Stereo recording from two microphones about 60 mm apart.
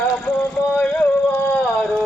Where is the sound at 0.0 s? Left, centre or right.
Left.